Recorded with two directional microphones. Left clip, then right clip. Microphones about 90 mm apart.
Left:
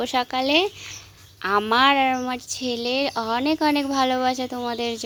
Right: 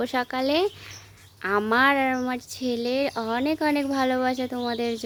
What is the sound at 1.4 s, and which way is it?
A woman's voice, 30° right (ahead or behind).